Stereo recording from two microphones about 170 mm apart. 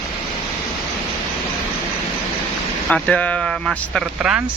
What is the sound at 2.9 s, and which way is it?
Speech, 5° left (ahead or behind).